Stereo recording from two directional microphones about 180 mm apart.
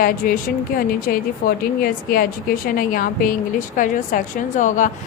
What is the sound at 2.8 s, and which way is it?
Speech, 50° left (ahead or behind).